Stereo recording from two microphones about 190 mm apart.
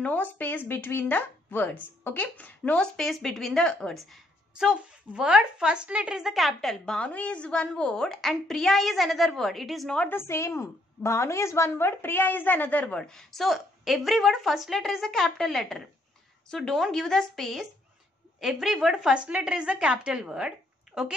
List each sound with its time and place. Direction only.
0.0 s speech: 10° left (ahead or behind)